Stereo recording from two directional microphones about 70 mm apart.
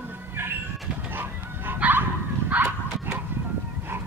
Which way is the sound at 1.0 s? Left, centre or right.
Right.